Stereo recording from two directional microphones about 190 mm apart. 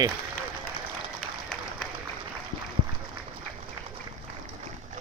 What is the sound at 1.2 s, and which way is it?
Applause, 5° left (ahead or behind).